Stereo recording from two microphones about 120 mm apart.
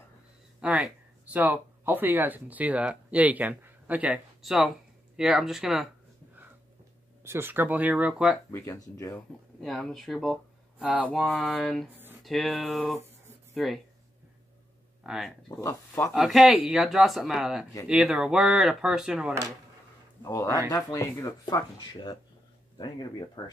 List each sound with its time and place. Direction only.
0.6 s a sound: 5° right (ahead or behind)
1.3 s speech: 15° right (ahead or behind)
7.2 s speech: 20° right (ahead or behind)
8.5 s speech: 25° left (ahead or behind)
9.6 s speech: centre (ahead or behind)
11.9 s a sound: 15° right (ahead or behind)
12.2 s speech: centre (ahead or behind)
15.0 s speech: centre (ahead or behind)
15.6 s speech: 20° left (ahead or behind)
16.1 s speech: centre (ahead or behind)
20.2 s speech: 30° left (ahead or behind)